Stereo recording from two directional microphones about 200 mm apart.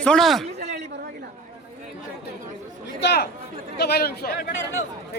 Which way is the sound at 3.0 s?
55° left (ahead or behind).